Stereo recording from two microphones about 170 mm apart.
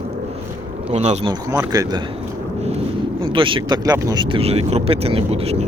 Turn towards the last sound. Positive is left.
turn(degrees=-40)  # may be behind; listen again after turning